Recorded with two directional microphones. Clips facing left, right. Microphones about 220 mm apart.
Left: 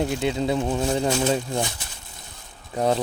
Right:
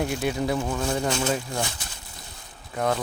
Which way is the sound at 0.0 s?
20° left (ahead or behind).